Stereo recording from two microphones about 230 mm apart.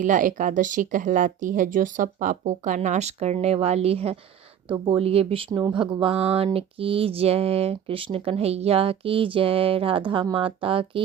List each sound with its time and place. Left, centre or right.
0.0 s speech: right